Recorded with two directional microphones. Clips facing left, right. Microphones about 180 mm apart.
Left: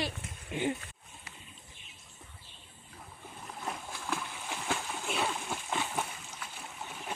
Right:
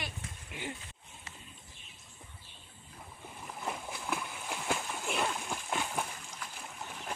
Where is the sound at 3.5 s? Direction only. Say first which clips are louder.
Right 1 dB; centre (ahead or behind).